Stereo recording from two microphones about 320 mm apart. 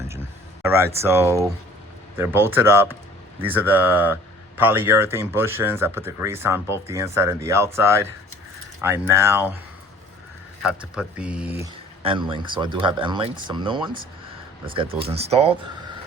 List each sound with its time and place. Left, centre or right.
0.6 s speech: centre
10.6 s speech: centre